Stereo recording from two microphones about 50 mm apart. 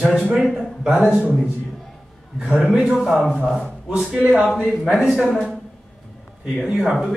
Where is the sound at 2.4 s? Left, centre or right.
Right.